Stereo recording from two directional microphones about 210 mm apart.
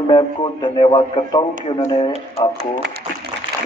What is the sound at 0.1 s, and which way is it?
Speech, 20° left (ahead or behind).